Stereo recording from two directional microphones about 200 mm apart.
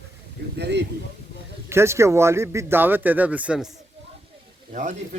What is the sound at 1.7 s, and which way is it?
Speech, 15° right (ahead or behind).